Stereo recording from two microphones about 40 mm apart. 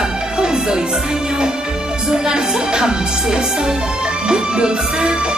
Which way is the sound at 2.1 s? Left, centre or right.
Centre.